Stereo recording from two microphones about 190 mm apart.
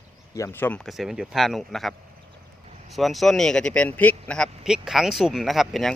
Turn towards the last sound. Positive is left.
turn(degrees=0)  # may be behind; listen again after turning